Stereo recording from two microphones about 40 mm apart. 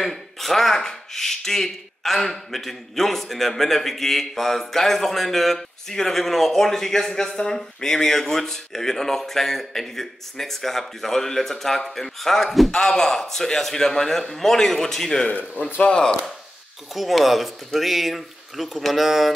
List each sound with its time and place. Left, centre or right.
0.0 s speech: centre
15.8 s speech: left
16.9 s speech: centre